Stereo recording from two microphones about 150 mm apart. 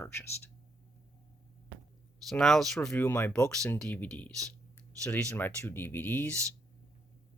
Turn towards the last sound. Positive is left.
turn(degrees=10)  # may be behind; listen again after turning